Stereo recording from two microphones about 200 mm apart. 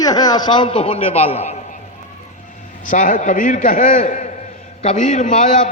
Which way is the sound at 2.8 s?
40° left (ahead or behind).